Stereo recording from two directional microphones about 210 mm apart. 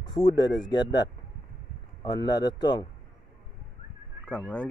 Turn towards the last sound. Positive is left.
turn(degrees=5)  # may be behind; listen again after turning